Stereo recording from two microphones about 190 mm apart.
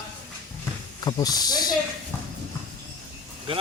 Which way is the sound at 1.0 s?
20° left (ahead or behind).